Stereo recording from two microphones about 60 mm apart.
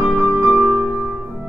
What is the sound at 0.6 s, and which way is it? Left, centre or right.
Music, right.